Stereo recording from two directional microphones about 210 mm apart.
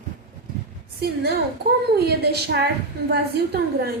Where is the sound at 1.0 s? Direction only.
50° right (ahead or behind).